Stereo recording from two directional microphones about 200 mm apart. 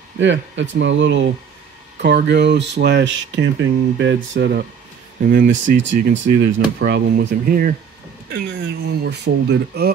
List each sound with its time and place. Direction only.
0.2 s speech: 65° right (ahead or behind)
5.2 s speech: 45° right (ahead or behind)
5.8 s speech: 65° right (ahead or behind)